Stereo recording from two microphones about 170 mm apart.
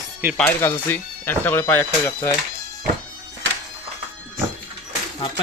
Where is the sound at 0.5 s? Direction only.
15° left (ahead or behind).